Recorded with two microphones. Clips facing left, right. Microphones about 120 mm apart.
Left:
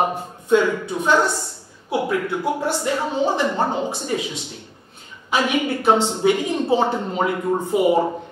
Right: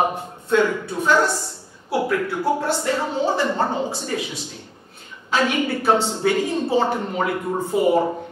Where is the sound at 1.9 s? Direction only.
20° left (ahead or behind).